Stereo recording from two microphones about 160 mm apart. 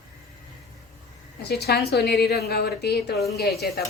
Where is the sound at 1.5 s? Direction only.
90° left.